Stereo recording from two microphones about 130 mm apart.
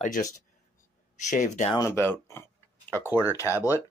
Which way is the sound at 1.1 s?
70° left (ahead or behind).